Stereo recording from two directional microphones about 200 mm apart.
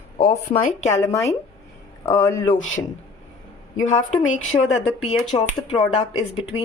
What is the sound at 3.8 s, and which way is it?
A woman's voice, 35° left (ahead or behind).